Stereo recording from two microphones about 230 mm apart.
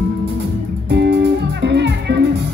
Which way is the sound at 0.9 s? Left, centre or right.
Right.